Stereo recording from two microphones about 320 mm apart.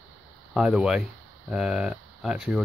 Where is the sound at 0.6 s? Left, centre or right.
Centre.